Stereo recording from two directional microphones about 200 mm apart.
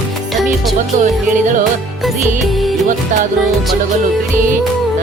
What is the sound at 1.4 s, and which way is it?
Speech, 40° right (ahead or behind).